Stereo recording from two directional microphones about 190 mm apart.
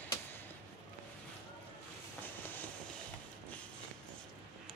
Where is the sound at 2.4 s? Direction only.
10° left (ahead or behind).